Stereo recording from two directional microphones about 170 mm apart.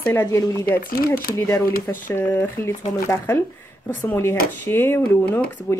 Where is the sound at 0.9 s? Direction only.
60° left (ahead or behind).